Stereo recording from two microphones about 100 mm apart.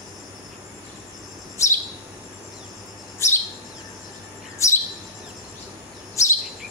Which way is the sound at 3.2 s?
30° left (ahead or behind).